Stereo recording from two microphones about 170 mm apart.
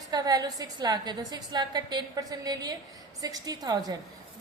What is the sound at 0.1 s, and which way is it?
A woman's voice, 20° right (ahead or behind).